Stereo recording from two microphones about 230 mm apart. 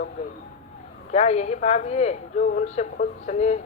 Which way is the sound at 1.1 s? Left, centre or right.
Left.